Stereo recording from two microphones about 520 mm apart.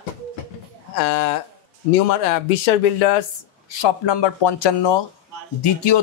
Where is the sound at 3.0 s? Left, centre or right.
Left.